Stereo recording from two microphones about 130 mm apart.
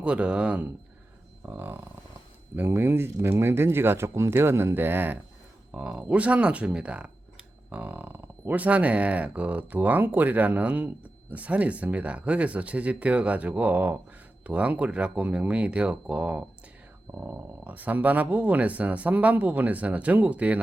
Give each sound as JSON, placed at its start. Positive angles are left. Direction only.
{"t": 0.0, "sound": "speech", "side_deg": -10}